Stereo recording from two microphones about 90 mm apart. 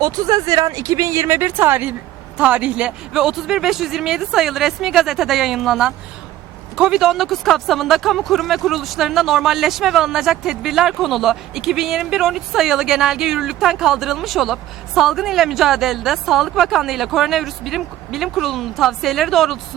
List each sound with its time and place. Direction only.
0.0 s speech: 45° right (ahead or behind); by 19.5 s centre (ahead or behind)